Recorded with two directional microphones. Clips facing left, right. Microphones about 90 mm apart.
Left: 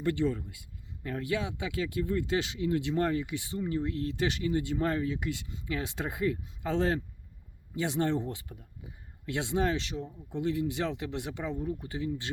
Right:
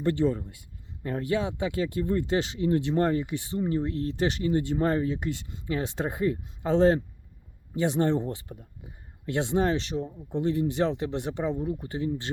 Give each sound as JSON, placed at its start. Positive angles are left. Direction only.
{"t": 0.0, "sound": "speech", "side_deg": -30}